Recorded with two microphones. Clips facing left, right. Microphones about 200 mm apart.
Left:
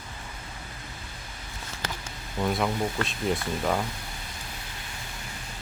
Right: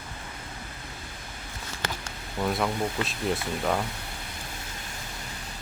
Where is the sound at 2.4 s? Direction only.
Centre (ahead or behind).